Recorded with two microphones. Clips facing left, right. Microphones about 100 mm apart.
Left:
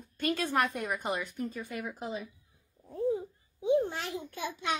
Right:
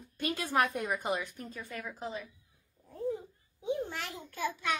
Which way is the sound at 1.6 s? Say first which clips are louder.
Left 2 dB; 15° left (ahead or behind).